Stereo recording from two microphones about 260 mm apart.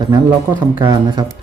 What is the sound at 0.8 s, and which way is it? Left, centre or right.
Speech, centre.